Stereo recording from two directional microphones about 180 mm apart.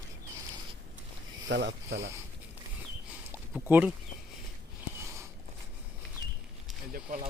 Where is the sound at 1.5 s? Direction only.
70° right (ahead or behind).